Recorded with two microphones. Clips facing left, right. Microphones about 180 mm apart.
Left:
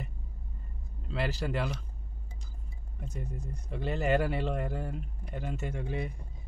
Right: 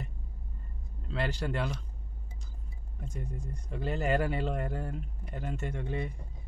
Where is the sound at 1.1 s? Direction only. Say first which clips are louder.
Even; 5° left (ahead or behind).